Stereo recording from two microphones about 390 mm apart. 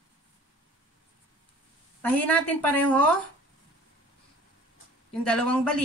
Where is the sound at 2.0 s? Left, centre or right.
Centre.